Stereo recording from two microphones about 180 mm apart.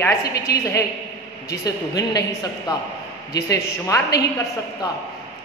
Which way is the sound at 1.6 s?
20° left (ahead or behind).